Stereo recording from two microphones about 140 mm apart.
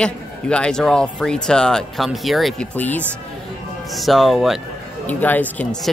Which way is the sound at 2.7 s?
10° left (ahead or behind).